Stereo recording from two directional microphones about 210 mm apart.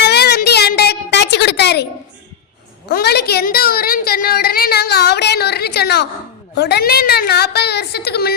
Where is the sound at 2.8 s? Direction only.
50° left (ahead or behind).